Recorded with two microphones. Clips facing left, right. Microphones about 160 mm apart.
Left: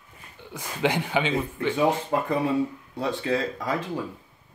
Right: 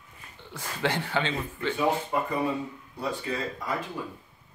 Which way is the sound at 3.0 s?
90° left.